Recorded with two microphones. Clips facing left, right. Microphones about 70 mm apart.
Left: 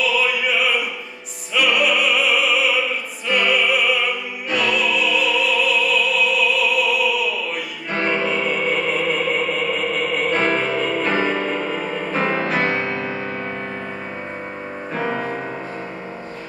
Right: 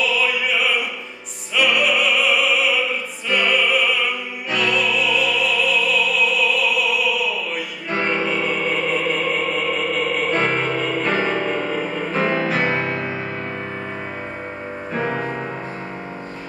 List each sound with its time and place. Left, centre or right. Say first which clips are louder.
0.2 s opera: left 1 dB; centre
1.5 s music: even; centre
12.8 s music: even; centre
15.0 s music: even; right